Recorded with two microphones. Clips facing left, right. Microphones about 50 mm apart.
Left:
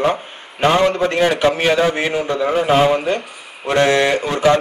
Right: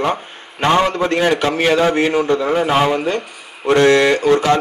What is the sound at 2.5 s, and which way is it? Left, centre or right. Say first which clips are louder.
Speech: even; centre.